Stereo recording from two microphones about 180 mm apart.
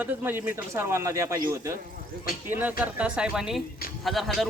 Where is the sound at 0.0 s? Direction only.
10° right (ahead or behind).